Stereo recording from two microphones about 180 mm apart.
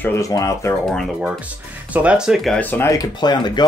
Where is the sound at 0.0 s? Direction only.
15° left (ahead or behind).